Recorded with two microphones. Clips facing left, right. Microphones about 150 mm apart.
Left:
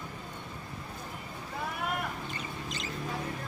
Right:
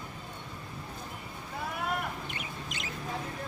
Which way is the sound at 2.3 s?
60° right (ahead or behind).